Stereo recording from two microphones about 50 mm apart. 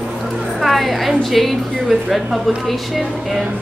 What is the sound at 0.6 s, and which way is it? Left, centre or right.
A woman's voice, centre.